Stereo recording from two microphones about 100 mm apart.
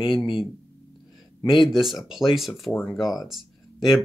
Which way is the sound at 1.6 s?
5° right (ahead or behind).